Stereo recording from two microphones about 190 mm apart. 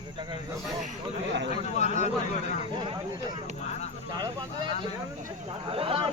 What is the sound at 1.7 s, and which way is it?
Speech, 40° left (ahead or behind).